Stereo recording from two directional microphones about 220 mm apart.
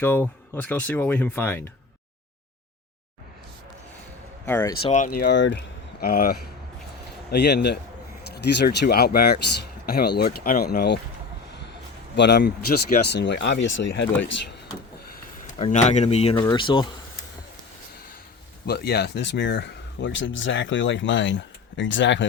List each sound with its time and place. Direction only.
0.0 s speech: 10° left (ahead or behind)
4.4 s speech: 10° left (ahead or behind)
4.8 s speech: 30° left (ahead or behind); by 11.0 s 45° left (ahead or behind)
12.1 s speech: 50° left (ahead or behind)
15.4 s speech: 30° left (ahead or behind)
18.6 s speech: 45° left (ahead or behind)